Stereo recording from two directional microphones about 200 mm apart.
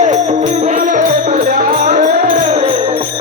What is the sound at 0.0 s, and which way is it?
Music, 35° right (ahead or behind).